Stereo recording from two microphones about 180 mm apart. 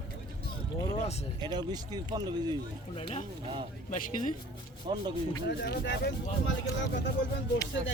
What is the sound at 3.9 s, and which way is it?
Speech, 45° left (ahead or behind).